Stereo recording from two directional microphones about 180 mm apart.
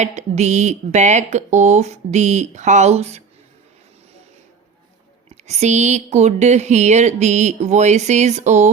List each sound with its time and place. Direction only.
0.0 s speech: 40° right (ahead or behind)
5.3 s speech: 40° right (ahead or behind)